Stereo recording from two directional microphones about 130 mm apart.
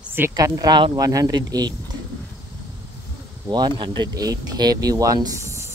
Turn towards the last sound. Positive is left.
turn(degrees=-25)  # may be behind; listen again after turning